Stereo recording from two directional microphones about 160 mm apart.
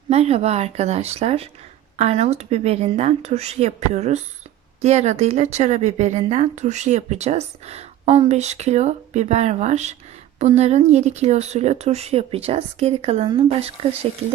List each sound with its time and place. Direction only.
0.1 s speech: 40° right (ahead or behind)